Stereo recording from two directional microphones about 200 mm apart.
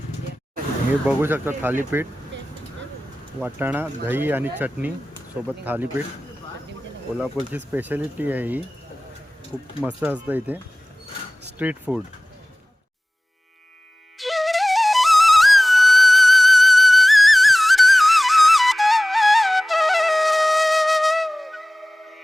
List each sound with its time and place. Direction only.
1.0 s speech: 10° right (ahead or behind)
2.3 s vehicle: 65° right (ahead or behind)
3.4 s speech: 10° right (ahead or behind)
7.2 s speech: 10° right (ahead or behind)
9.8 s speech: 10° right (ahead or behind)
14.2 s flute: centre (ahead or behind)